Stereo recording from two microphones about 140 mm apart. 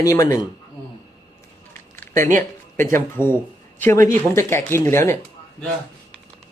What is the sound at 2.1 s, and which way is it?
Speech, 65° right (ahead or behind).